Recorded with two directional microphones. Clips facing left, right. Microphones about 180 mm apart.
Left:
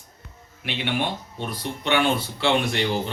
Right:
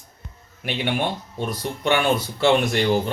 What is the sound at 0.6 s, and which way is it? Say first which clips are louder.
Speech: right 2 dB; 45° right (ahead or behind).